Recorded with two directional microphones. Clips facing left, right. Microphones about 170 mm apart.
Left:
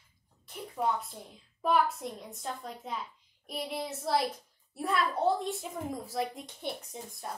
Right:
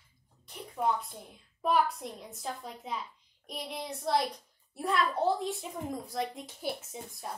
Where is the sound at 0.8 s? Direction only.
Centre (ahead or behind).